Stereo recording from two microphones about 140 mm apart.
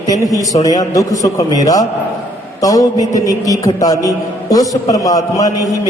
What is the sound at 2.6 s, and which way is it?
A man's voice, 25° left (ahead or behind).